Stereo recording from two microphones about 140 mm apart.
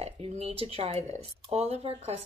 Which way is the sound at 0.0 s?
45° right (ahead or behind).